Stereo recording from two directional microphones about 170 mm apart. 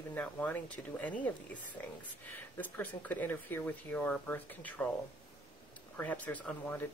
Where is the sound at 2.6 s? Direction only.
10° left (ahead or behind).